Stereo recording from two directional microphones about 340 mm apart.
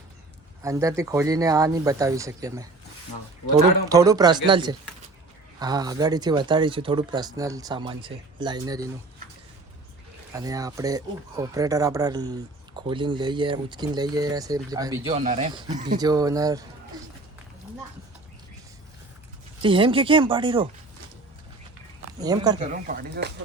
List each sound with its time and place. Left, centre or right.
0.6 s speech: centre
3.8 s speech: centre
10.3 s speech: centre
19.6 s speech: centre
22.2 s speech: centre
23.0 s speech: right